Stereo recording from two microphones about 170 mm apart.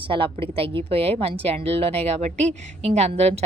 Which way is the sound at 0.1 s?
30° right (ahead or behind).